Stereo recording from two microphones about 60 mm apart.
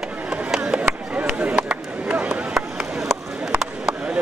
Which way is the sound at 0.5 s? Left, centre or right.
Centre.